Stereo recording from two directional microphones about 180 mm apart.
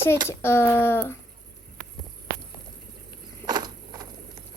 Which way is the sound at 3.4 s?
20° right (ahead or behind).